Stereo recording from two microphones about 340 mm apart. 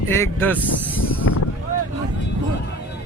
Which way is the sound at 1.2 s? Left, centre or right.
Left.